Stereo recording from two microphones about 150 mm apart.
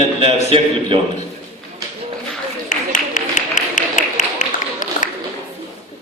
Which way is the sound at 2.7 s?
55° left (ahead or behind).